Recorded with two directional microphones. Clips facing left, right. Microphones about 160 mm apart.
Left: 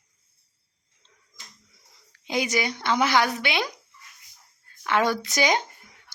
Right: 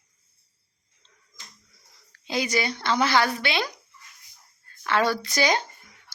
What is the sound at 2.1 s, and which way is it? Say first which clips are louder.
A woman's voice: left 1 dB; 15° left (ahead or behind).